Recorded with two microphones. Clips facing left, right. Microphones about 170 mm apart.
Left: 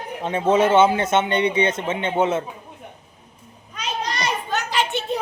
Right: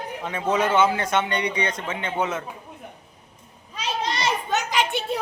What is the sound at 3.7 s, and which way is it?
Children playing, 25° right (ahead or behind).